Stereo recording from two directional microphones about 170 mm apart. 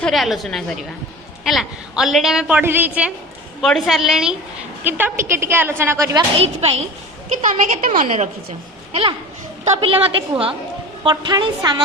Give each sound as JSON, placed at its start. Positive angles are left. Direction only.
{"t": 0.0, "sound": "a woman's voice", "side_deg": 0}
{"t": 3.6, "sound": "a woman's voice", "side_deg": 0}
{"t": 6.3, "sound": "a woman's voice", "side_deg": -35}
{"t": 7.4, "sound": "a woman's voice", "side_deg": -45}
{"t": 9.7, "sound": "a woman's voice", "side_deg": -35}